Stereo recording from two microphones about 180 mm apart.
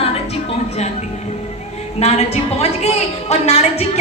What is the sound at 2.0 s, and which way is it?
A woman's voice, 35° left (ahead or behind).